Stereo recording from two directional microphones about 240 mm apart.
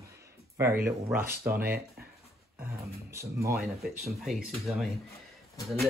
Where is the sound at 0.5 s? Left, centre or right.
Centre.